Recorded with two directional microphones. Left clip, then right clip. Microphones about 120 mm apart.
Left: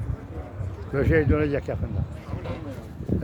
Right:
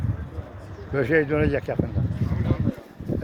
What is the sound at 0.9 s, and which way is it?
Speech, centre (ahead or behind).